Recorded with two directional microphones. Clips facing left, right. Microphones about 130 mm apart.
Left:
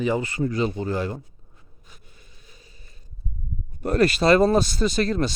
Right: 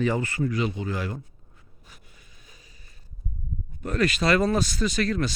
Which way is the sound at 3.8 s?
35° left (ahead or behind).